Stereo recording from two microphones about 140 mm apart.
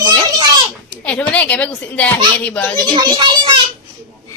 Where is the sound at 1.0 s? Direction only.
10° left (ahead or behind).